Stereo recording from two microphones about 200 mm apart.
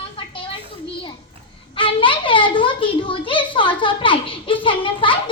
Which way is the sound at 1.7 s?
25° left (ahead or behind).